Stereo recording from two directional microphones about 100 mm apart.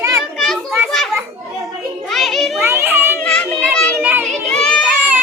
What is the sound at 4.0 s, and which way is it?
Children playing, 20° right (ahead or behind).